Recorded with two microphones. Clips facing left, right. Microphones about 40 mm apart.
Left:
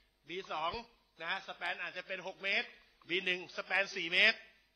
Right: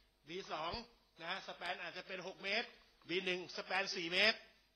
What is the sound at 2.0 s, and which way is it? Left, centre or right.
Speech, left.